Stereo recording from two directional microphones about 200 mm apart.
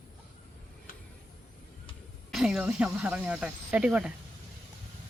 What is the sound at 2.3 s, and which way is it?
Speech, 5° right (ahead or behind).